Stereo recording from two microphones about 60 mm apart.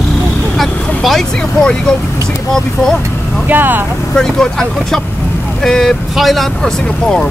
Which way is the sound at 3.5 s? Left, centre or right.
Right.